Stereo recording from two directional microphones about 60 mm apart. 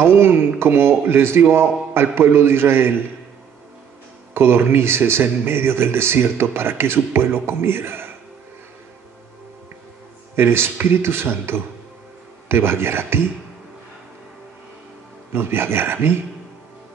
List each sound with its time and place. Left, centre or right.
0.0 s speech: right
4.3 s speech: right
10.3 s speech: right
15.3 s speech: right